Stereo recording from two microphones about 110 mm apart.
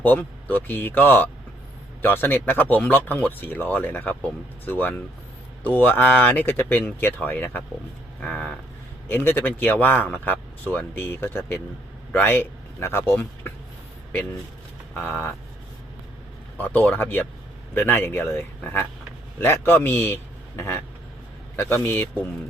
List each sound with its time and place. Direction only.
0.0 s speech: 15° left (ahead or behind)
14.9 s a man's voice: 20° left (ahead or behind)
16.6 s a man's voice: 15° left (ahead or behind)